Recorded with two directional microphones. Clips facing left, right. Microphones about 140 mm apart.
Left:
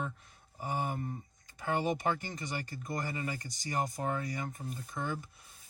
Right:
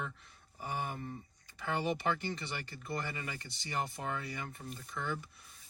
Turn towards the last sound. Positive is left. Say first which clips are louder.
# left 2 dB
turn(degrees=45)  # may be behind; listen again after turning